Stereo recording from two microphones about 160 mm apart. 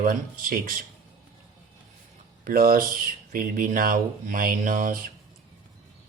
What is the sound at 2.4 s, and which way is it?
Speech, 65° right (ahead or behind).